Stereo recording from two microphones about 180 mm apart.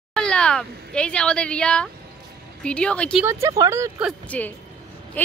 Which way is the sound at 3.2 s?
15° right (ahead or behind).